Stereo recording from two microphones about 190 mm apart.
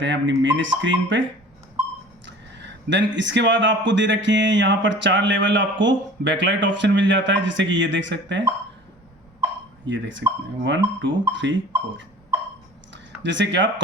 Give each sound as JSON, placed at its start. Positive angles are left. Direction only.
{"t": 0.0, "sound": "a man's voice", "side_deg": -70}
{"t": 2.2, "sound": "a man's voice", "side_deg": -70}
{"t": 9.8, "sound": "a man's voice", "side_deg": -75}
{"t": 13.2, "sound": "a man's voice", "side_deg": -70}